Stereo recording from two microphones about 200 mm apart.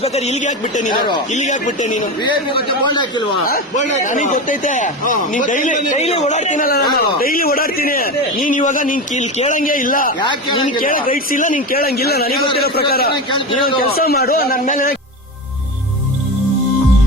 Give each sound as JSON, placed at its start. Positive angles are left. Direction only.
{"t": 0.0, "sound": "a man's voice", "side_deg": 30}
{"t": 2.6, "sound": "a man's voice", "side_deg": 20}
{"t": 3.4, "sound": "a man's voice", "side_deg": 40}
{"t": 10.2, "sound": "a man's voice", "side_deg": 25}
{"t": 10.8, "sound": "a man's voice", "side_deg": 45}
{"t": 13.3, "sound": "a man's voice", "side_deg": 25}
{"t": 13.7, "sound": "a man's voice", "side_deg": 50}